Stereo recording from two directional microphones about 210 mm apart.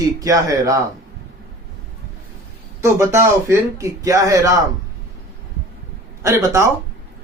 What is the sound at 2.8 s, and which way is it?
Speech, 15° right (ahead or behind).